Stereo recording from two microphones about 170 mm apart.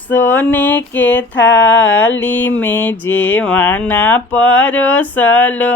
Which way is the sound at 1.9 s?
10° left (ahead or behind).